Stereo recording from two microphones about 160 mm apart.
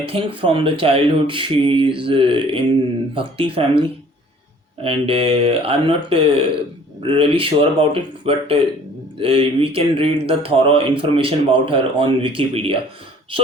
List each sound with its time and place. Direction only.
0.0 s speech: 35° right (ahead or behind)